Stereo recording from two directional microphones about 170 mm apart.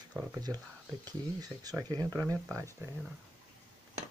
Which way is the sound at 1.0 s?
20° right (ahead or behind).